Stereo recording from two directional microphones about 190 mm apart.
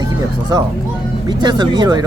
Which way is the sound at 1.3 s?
25° right (ahead or behind).